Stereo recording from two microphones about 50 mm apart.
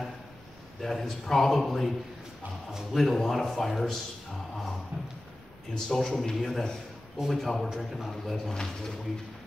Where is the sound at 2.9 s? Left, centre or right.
Centre.